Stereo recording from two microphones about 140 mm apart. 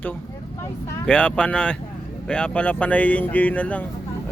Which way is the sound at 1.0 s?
10° left (ahead or behind).